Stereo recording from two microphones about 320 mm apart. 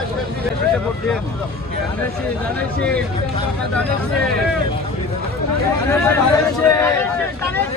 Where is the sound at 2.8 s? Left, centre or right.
Centre.